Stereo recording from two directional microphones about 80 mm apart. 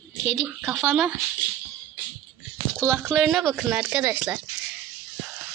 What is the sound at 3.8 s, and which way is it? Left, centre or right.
Speech, centre.